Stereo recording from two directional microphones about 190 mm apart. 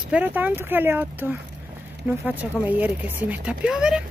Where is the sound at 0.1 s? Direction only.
10° right (ahead or behind).